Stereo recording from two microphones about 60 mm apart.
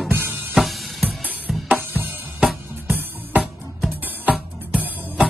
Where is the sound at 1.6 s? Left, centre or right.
Right.